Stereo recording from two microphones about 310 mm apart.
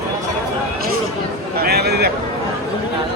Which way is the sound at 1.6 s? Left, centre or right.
Right.